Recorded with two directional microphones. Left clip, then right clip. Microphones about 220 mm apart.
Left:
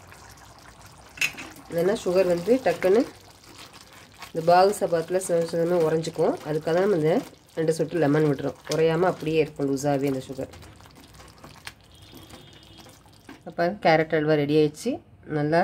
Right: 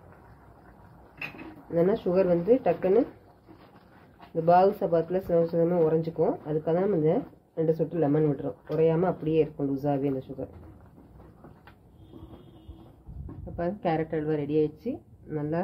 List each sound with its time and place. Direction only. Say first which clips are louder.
1.8 s speech: left 2 dB; 15° left (ahead or behind)
4.5 s speech: left 3 dB; 20° left (ahead or behind)
13.6 s speech: left 8 dB; 35° left (ahead or behind)